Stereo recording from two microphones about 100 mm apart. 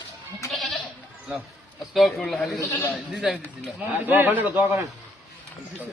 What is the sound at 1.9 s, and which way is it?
Speech, centre (ahead or behind).